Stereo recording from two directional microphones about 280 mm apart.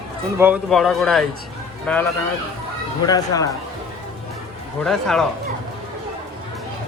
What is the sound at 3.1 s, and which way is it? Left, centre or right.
Speech, centre.